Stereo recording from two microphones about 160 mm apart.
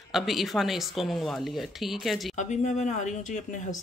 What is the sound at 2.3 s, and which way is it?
Speech, 45° left (ahead or behind).